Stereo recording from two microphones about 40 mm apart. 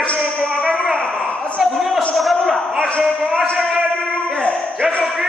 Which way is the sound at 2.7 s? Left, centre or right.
Left.